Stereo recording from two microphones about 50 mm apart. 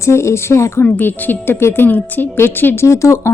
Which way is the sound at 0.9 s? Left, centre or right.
Left.